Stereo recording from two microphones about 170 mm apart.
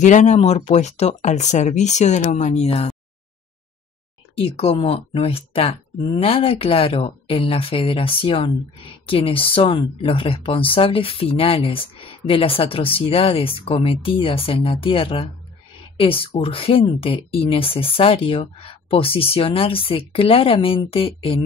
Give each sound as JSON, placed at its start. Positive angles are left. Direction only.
{"t": 0.0, "sound": "speech", "side_deg": 45}
{"t": 4.4, "sound": "speech", "side_deg": 35}